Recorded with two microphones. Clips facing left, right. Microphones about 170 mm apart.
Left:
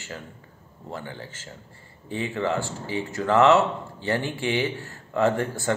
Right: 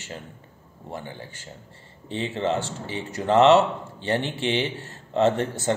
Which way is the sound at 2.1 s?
20° right (ahead or behind).